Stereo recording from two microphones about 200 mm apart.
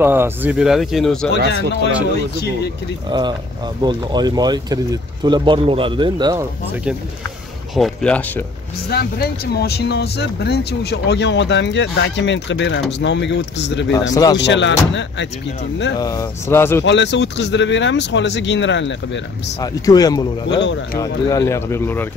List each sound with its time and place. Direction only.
0.0 s speech: 10° right (ahead or behind)
3.1 s a man's voice: 20° right (ahead or behind)
6.7 s speech: 5° right (ahead or behind)
8.9 s speech: 55° left (ahead or behind)
14.1 s speech: 20° left (ahead or behind)
14.4 s speech: 65° left (ahead or behind)
16.0 s speech: 15° left (ahead or behind)
16.8 s speech: 60° left (ahead or behind)
19.6 s speech: 20° left (ahead or behind)
20.5 s speech: 60° left (ahead or behind)
21.0 s speech: 15° left (ahead or behind)